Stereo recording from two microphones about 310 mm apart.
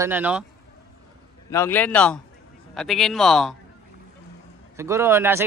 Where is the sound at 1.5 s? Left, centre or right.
Centre.